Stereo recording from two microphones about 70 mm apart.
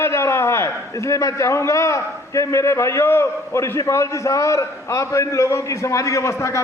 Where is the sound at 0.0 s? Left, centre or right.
Left.